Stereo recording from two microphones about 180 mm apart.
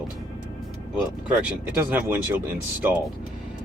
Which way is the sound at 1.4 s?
10° right (ahead or behind).